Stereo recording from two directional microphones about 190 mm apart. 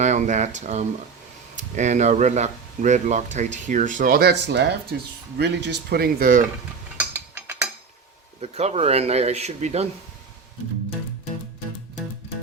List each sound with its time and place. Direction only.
0.0 s speech: 40° right (ahead or behind)
6.9 s mechanisms: 10° right (ahead or behind)
8.4 s speech: 35° right (ahead or behind)